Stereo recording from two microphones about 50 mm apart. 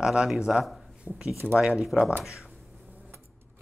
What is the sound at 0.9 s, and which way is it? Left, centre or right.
Speech, centre.